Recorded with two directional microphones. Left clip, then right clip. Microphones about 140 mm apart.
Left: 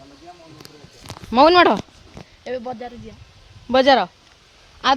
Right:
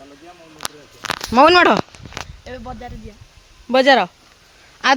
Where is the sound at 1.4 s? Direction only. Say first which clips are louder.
Right 1 dB; centre (ahead or behind).